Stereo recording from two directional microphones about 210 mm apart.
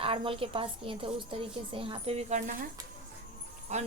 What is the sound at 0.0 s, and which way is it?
A woman's voice, 25° right (ahead or behind).